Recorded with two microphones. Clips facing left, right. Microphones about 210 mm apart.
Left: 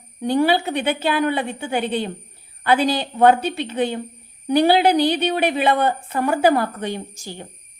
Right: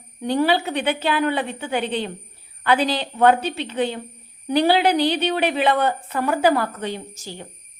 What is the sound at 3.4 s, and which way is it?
Speech, 15° left (ahead or behind).